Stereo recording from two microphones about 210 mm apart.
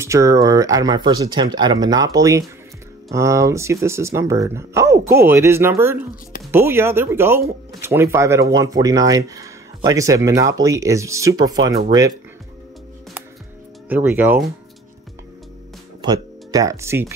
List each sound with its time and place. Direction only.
0.0 s speech: 15° right (ahead or behind)
13.8 s speech: 10° right (ahead or behind)
16.0 s speech: 20° right (ahead or behind)